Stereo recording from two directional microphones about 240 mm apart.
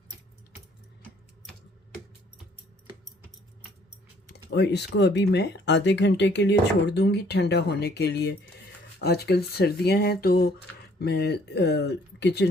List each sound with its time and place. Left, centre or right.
4.3 s speech: left